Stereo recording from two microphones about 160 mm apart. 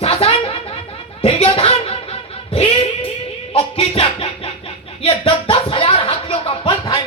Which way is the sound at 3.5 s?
35° left (ahead or behind).